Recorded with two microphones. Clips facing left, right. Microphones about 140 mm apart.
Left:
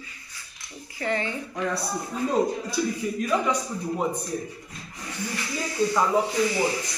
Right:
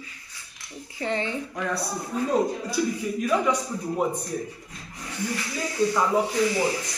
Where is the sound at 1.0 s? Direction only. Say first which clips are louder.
Even; 25° right (ahead or behind).